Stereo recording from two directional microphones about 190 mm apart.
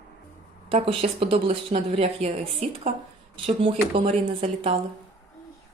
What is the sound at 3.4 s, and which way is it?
Speech, 30° right (ahead or behind).